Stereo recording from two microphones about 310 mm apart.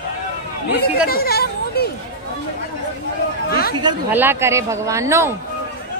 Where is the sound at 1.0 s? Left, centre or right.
Left.